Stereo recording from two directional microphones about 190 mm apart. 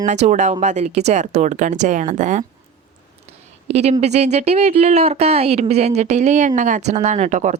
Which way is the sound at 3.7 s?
35° right (ahead or behind).